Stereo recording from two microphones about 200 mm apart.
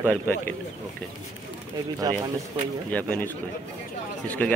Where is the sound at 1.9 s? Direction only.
20° right (ahead or behind).